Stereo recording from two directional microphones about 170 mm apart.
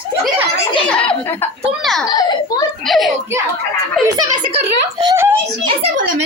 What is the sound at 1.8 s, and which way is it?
Speech, centre (ahead or behind).